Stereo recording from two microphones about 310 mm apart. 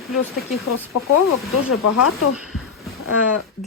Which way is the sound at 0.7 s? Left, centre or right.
Left.